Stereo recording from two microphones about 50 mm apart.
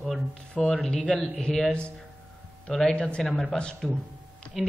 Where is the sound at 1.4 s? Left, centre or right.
Centre.